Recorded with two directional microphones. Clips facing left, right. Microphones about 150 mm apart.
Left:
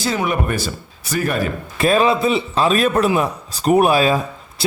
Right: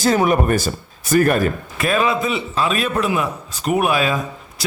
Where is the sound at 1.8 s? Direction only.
30° left (ahead or behind).